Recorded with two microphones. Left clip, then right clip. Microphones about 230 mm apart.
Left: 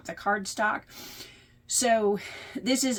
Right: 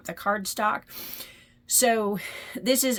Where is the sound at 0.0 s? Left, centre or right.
Right.